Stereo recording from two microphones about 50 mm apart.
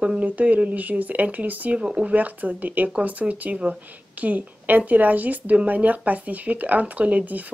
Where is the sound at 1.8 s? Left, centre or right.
Right.